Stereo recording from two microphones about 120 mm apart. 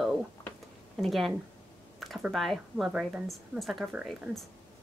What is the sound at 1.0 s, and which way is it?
Speech, centre (ahead or behind).